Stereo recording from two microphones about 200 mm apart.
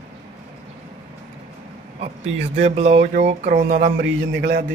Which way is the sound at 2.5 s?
30° right (ahead or behind).